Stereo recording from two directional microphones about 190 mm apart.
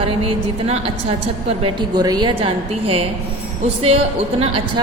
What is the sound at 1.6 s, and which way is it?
A woman's voice, 25° right (ahead or behind).